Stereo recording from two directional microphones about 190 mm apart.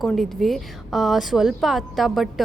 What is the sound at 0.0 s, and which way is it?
A woman's voice, centre (ahead or behind).